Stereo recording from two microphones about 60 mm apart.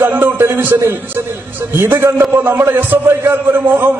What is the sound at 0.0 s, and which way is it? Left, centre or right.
A man's voice, right.